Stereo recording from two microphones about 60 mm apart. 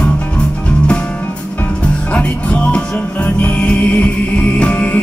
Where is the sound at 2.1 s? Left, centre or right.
Left.